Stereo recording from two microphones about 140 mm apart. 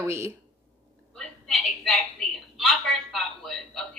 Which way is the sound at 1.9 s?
Centre (ahead or behind).